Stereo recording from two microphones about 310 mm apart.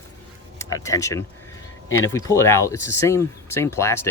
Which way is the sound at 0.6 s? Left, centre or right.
Centre.